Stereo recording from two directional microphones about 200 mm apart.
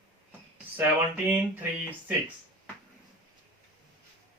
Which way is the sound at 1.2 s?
10° right (ahead or behind).